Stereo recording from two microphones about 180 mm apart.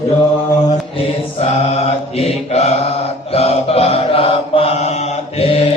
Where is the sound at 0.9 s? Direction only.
35° left (ahead or behind).